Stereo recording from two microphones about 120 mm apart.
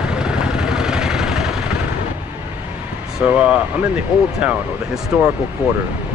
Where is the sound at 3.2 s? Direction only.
10° right (ahead or behind).